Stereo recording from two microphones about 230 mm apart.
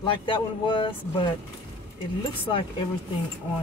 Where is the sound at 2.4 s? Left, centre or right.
Left.